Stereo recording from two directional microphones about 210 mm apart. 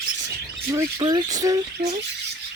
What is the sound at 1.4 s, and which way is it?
Rub, 15° right (ahead or behind).